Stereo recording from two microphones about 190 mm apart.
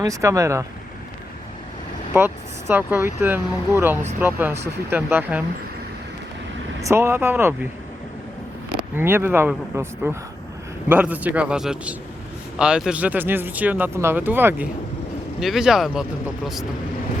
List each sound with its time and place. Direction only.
0.0 s speech: 15° right (ahead or behind)
2.1 s speech: 10° right (ahead or behind)
6.8 s speech: 15° right (ahead or behind)
8.7 s speech: 10° right (ahead or behind)